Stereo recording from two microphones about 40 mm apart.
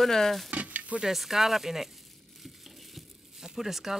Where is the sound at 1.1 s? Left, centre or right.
Centre.